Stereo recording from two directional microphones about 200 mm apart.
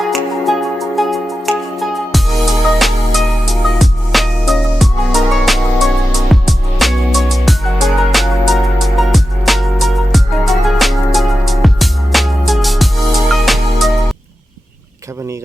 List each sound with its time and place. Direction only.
0.4 s music: centre (ahead or behind)